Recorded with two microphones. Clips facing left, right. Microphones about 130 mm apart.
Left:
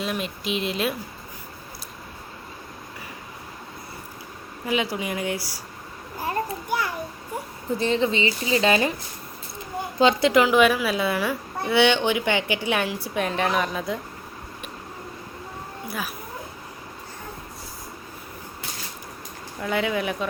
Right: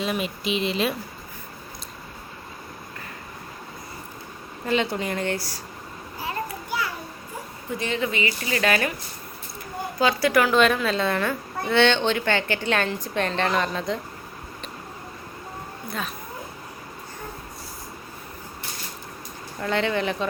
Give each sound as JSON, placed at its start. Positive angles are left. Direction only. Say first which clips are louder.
{"t": 0.0, "sound": "speech", "louder": "right 2 dB", "side_deg": 0}
{"t": 4.6, "sound": "a woman's voice", "louder": "right 1 dB", "side_deg": 5}
{"t": 6.1, "sound": "a sound", "louder": "left 4 dB", "side_deg": 45}
{"t": 7.8, "sound": "speech", "louder": "left 4 dB", "side_deg": 30}
{"t": 10.0, "sound": "speech", "louder": "left 2 dB", "side_deg": 20}
{"t": 10.6, "sound": "a woman's voice", "louder": "left 1 dB", "side_deg": 5}
{"t": 15.9, "sound": "speech", "louder": "even", "side_deg": 5}
{"t": 19.5, "sound": "speech", "louder": "right 1 dB", "side_deg": 5}